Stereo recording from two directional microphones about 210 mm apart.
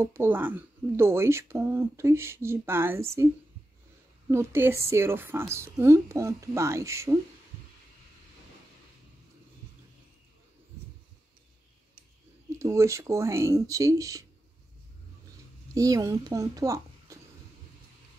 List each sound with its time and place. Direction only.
0.0 s speech: 10° right (ahead or behind)
4.3 s speech: 10° right (ahead or behind)
12.5 s speech: 15° right (ahead or behind)
15.7 s a child's voice: 15° right (ahead or behind)